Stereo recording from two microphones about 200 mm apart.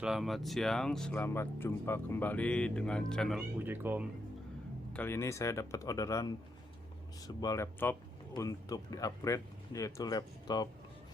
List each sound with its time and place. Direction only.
0.0 s speech: centre (ahead or behind)
3.6 s speech: 10° right (ahead or behind)
4.9 s speech: 10° left (ahead or behind)